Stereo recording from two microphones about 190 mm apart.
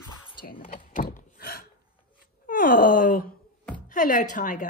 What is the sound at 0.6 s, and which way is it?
Speech, 40° left (ahead or behind).